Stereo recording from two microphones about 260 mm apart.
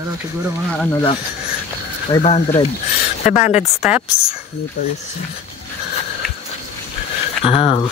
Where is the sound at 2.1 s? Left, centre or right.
Left.